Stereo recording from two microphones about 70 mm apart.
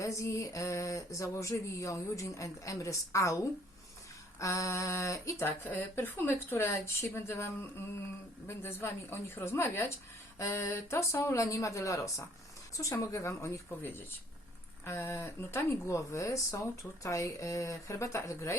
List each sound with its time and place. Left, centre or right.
0.0 s speech: left
5.5 s speech: left
14.8 s speech: left